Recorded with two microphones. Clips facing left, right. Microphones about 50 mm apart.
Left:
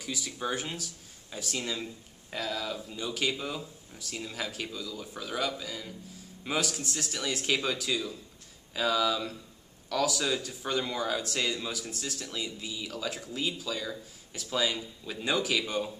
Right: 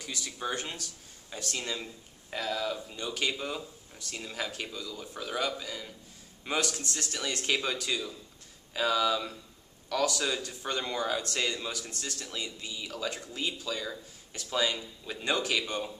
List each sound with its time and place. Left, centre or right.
0.0 s a man's voice: centre